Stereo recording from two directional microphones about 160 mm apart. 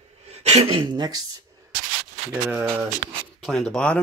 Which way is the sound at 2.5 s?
10° right (ahead or behind).